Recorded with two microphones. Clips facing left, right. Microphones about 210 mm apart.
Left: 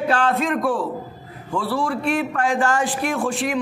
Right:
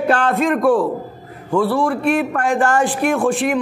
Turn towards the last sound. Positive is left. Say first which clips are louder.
# right 6 dB
turn(degrees=-55)  # may be behind; listen again after turning